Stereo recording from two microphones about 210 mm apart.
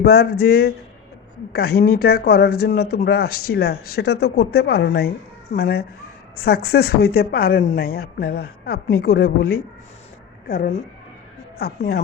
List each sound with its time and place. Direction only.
0.0 s speech: 50° left (ahead or behind)
11.8 s speech: 45° left (ahead or behind)